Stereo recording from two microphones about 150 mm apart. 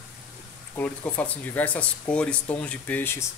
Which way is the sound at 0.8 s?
10° left (ahead or behind).